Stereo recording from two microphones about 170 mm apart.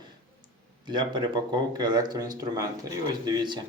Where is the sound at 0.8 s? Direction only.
25° right (ahead or behind).